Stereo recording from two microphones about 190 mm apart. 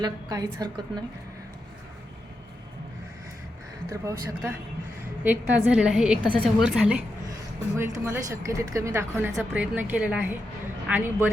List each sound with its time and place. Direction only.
0.0 s a woman's voice: 20° right (ahead or behind)
3.8 s a woman's voice: 15° right (ahead or behind)